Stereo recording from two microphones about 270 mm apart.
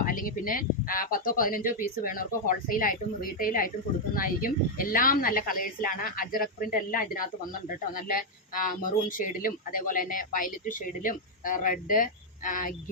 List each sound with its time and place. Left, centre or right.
0.0 s speech: left